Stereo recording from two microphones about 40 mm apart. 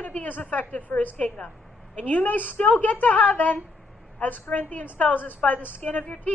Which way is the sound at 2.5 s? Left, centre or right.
Left.